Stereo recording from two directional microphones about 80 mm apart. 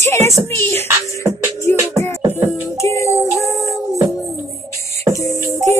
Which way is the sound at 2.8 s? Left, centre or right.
Left.